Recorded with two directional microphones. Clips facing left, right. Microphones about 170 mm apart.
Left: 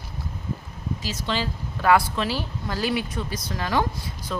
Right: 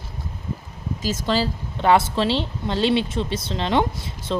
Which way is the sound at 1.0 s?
45° right (ahead or behind).